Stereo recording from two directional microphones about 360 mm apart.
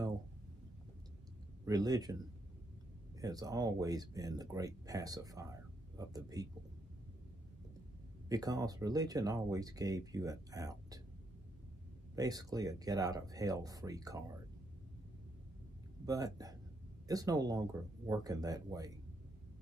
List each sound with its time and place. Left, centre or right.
1.7 s speech: centre
8.3 s speech: centre
12.2 s speech: centre
16.1 s speech: centre